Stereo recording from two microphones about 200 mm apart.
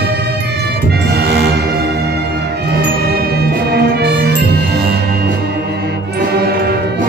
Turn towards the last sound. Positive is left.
turn(degrees=-50)  # may be behind; listen again after turning